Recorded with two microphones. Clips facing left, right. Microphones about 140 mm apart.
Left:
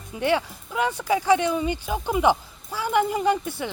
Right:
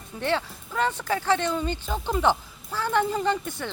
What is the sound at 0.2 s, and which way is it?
Speech, 15° left (ahead or behind).